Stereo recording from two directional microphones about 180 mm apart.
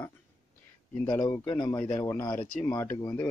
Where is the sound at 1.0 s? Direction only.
20° left (ahead or behind).